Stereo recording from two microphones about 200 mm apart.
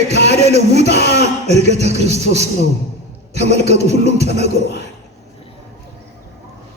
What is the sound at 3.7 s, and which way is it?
Speech, 35° right (ahead or behind).